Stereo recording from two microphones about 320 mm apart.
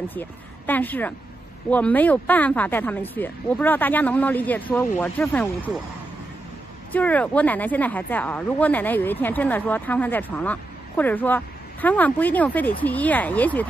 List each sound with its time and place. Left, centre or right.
0.1 s speech: centre
6.9 s speech: centre